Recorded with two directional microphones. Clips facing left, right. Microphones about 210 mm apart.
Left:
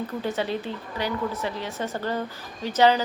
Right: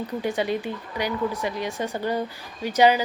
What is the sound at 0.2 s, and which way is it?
A woman's voice, 15° right (ahead or behind).